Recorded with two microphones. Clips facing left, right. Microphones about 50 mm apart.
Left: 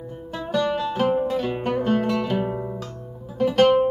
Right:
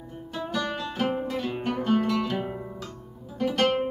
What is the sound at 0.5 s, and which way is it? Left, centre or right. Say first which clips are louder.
Music: left 8 dB; centre.